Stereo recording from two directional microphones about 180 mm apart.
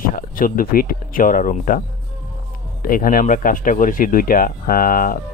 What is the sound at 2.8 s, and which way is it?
Speech, 50° left (ahead or behind).